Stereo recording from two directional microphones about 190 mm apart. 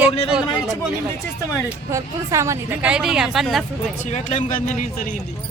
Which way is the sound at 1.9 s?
15° right (ahead or behind).